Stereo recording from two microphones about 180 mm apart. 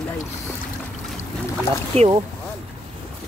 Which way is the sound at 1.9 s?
35° right (ahead or behind).